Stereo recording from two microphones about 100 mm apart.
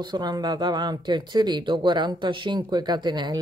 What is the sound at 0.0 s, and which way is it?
A woman's voice, 50° right (ahead or behind).